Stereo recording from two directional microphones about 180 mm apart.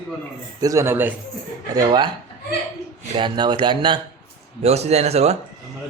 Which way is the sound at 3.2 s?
25° right (ahead or behind).